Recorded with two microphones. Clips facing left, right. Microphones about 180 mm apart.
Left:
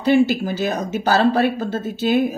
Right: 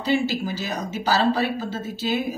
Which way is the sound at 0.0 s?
55° left (ahead or behind).